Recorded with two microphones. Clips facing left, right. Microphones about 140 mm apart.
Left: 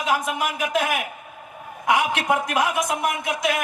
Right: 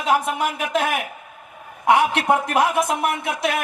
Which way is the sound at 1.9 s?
30° right (ahead or behind).